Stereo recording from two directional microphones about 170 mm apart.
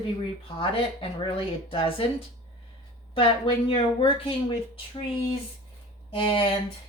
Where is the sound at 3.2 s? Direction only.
30° left (ahead or behind).